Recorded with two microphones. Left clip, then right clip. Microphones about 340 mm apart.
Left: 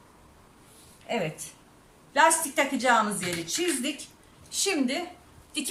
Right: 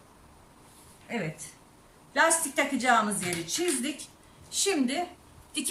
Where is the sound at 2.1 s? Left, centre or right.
Centre.